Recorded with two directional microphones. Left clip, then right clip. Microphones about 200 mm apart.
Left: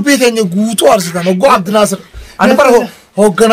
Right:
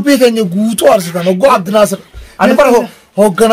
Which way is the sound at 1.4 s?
Centre (ahead or behind).